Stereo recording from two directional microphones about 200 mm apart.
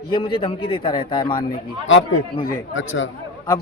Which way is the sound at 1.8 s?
75° left (ahead or behind).